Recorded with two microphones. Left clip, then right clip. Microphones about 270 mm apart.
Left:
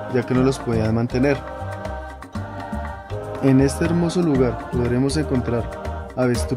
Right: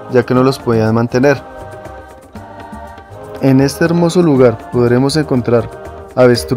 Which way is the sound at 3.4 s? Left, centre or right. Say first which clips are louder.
Right 7 dB; centre.